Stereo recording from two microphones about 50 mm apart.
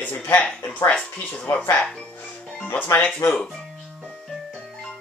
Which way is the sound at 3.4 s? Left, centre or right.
Centre.